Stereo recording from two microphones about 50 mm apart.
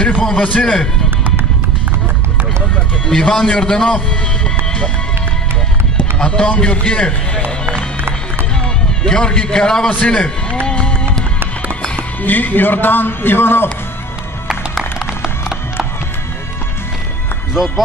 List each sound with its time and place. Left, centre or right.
0.2 s speech: left
3.1 s a man's voice: centre
6.1 s speech: left
9.0 s a man's voice: centre
9.8 s speech: left
10.7 s music: centre
12.2 s a man's voice: left
17.6 s speech: centre